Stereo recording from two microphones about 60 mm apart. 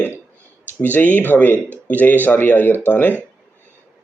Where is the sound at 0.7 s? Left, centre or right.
Left.